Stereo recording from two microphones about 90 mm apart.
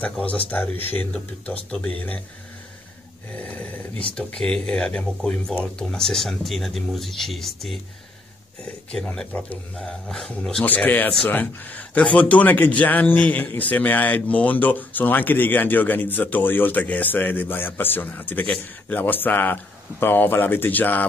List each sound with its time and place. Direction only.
0.0 s a man's voice: 15° left (ahead or behind)
3.3 s a sound: 15° left (ahead or behind)
4.1 s a man's voice: 10° left (ahead or behind)
9.0 s a man's voice: 5° left (ahead or behind)
10.6 s a man's voice: 20° left (ahead or behind)